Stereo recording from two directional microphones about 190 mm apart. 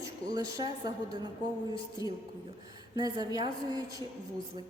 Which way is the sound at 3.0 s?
20° right (ahead or behind).